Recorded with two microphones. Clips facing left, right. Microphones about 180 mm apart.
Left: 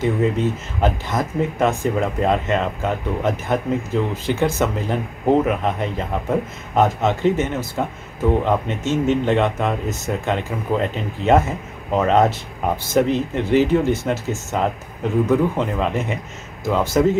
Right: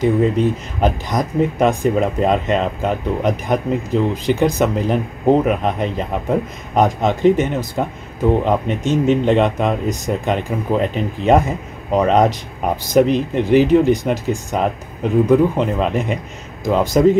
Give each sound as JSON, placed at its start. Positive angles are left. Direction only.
{"t": 0.0, "sound": "speech", "side_deg": -15}